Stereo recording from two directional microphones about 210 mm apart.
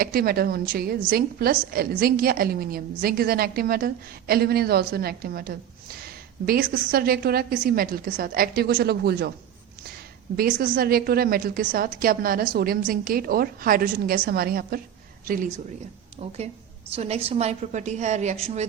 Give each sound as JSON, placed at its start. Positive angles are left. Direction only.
{"t": 0.0, "sound": "a woman's voice", "side_deg": -45}
{"t": 10.3, "sound": "a woman's voice", "side_deg": -45}